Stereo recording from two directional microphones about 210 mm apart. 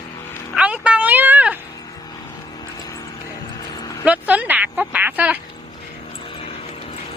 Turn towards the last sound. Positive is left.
turn(degrees=-5)  # may be behind; listen again after turning